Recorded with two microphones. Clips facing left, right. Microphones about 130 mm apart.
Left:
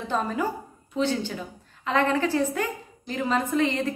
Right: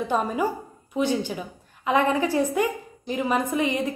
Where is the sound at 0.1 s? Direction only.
15° right (ahead or behind).